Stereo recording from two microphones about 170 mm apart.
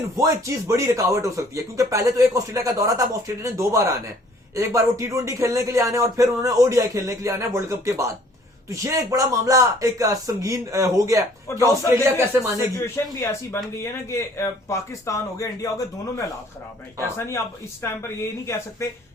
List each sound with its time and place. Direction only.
0.2 s speech: 20° right (ahead or behind)
12.7 s a man's voice: 15° left (ahead or behind)
17.2 s a man's voice: 15° left (ahead or behind)